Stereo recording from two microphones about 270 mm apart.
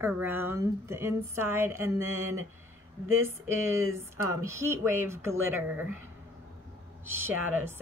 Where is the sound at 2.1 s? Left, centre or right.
Right.